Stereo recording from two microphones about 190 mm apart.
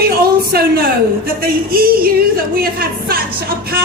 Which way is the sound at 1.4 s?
50° right (ahead or behind).